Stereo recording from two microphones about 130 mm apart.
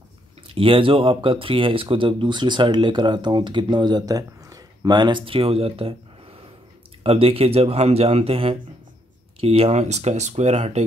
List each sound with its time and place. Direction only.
0.5 s speech: 45° right (ahead or behind)